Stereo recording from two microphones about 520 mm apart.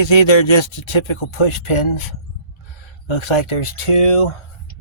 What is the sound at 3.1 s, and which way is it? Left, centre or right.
Speech, left.